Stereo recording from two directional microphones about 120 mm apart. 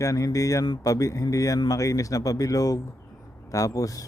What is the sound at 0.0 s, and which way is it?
Speech, 30° left (ahead or behind).